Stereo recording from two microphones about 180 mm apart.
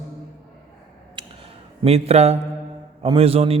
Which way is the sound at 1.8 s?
35° right (ahead or behind).